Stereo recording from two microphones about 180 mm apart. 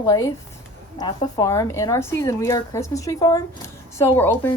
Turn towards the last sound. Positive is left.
turn(degrees=10)  # may be behind; listen again after turning